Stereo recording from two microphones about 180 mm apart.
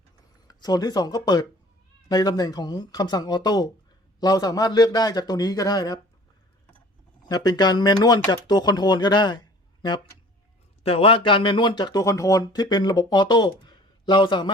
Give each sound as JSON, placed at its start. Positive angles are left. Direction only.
{"t": 0.4, "sound": "speech", "side_deg": 20}
{"t": 7.3, "sound": "speech", "side_deg": 20}